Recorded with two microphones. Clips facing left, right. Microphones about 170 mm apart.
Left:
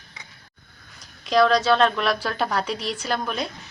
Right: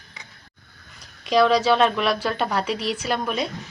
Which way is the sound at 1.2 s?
5° right (ahead or behind).